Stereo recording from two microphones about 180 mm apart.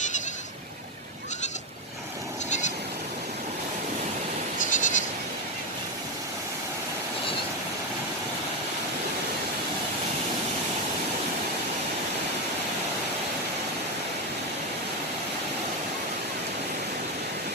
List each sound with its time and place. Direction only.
2.5 s bleat: 40° left (ahead or behind)
4.6 s bleat: 45° left (ahead or behind)